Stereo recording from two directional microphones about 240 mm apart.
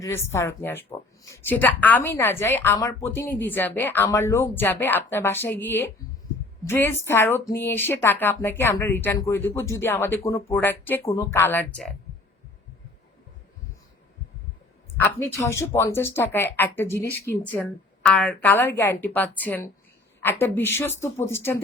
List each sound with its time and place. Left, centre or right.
0.0 s speech: centre
15.0 s speech: centre